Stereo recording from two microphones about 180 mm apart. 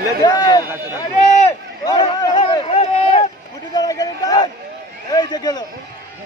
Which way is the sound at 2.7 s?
35° left (ahead or behind).